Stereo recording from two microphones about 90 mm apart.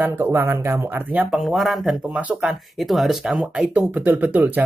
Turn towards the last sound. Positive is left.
turn(degrees=-20)  # may be behind; listen again after turning